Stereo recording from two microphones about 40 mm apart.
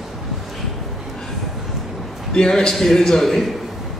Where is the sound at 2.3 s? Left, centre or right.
Centre.